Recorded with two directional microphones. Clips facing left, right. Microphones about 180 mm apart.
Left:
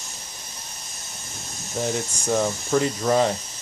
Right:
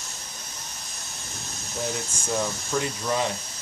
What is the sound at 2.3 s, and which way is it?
Speech, 45° left (ahead or behind).